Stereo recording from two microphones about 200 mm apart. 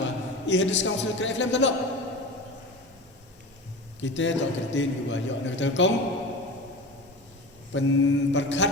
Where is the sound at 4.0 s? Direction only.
65° left (ahead or behind).